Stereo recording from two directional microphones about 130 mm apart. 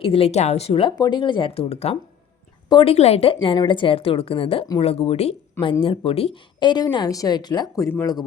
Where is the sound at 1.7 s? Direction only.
55° left (ahead or behind).